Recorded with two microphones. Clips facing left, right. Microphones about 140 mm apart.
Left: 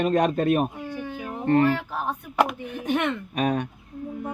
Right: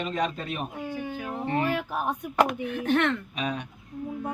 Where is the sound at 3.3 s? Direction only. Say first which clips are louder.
Left 7 dB; 50° left (ahead or behind).